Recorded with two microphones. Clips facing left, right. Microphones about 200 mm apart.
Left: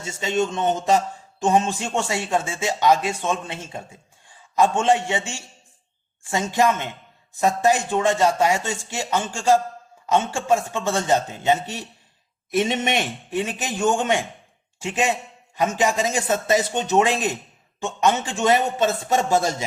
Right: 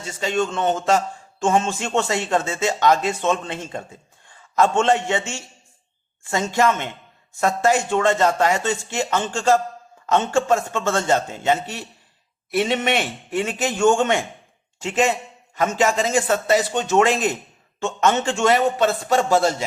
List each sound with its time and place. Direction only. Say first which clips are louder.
0.3 s a man's voice: right 1 dB; 20° left (ahead or behind)
6.5 s a man's voice: even; 15° left (ahead or behind)